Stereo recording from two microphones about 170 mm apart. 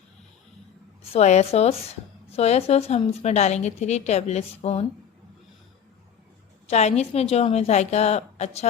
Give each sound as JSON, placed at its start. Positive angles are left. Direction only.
{"t": 1.1, "sound": "a woman's voice", "side_deg": 40}
{"t": 6.7, "sound": "a woman's voice", "side_deg": 40}